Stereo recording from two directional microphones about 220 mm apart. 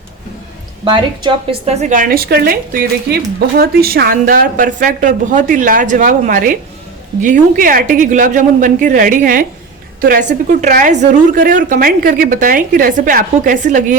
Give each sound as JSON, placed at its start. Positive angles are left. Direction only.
{"t": 0.9, "sound": "a woman's voice", "side_deg": -25}